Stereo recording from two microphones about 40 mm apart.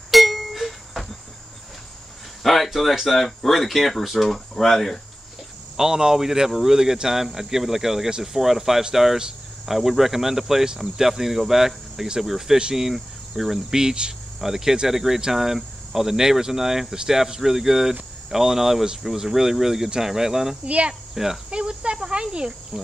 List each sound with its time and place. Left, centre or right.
0.1 s a sound: centre
2.4 s speech: centre
4.6 s cricket: centre
5.8 s speech: centre
12.5 s speech: right
12.8 s speech: centre
20.6 s cricket: right
21.1 s insect: centre
21.5 s speech: right